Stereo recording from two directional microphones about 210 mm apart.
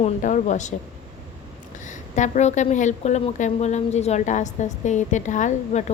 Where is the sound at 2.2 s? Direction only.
35° left (ahead or behind).